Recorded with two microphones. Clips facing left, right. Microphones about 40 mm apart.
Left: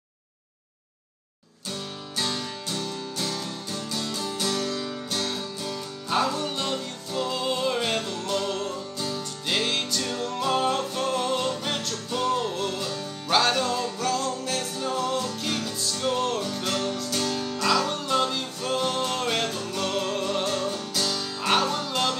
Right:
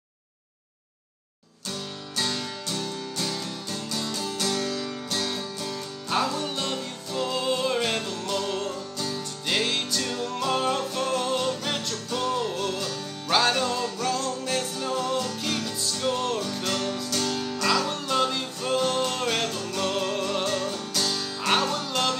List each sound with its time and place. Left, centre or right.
2.1 s music: centre
4.2 s music: centre
6.2 s music: centre
13.3 s music: centre
19.7 s music: centre